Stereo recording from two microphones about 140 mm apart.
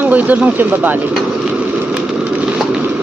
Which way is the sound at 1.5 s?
10° right (ahead or behind).